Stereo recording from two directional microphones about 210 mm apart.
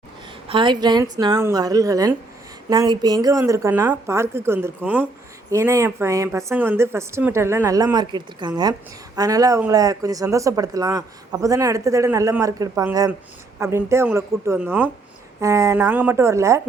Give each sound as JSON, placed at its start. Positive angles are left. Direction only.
{"t": 0.4, "sound": "speech", "side_deg": -25}